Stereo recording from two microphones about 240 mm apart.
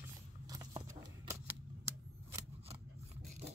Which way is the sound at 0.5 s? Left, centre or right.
Centre.